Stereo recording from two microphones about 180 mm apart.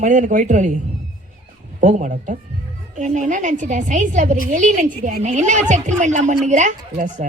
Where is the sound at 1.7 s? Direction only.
45° right (ahead or behind).